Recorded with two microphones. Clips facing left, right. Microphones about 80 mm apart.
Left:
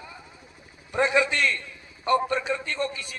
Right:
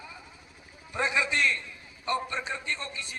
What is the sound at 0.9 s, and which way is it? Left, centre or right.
A man's voice, left.